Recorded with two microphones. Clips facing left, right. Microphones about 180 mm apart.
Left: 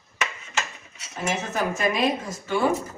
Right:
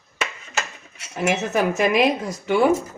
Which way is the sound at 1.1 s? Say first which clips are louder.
Right 6 dB; 70° right (ahead or behind).